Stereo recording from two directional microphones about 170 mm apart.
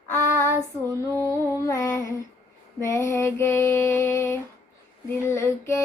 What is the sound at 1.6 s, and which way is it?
Female singing, 15° left (ahead or behind).